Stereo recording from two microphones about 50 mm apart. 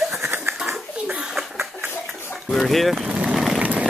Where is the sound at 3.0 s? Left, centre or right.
Right.